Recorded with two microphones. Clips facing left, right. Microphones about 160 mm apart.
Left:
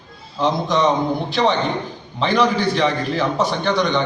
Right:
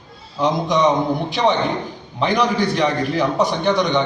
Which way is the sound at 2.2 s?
15° right (ahead or behind).